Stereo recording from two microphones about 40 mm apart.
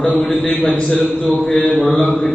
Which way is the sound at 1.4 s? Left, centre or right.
Centre.